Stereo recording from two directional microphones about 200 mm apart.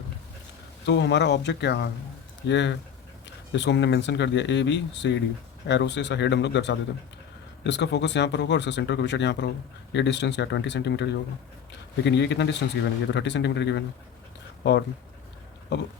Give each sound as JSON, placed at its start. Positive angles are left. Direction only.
{"t": 0.9, "sound": "speech", "side_deg": 60}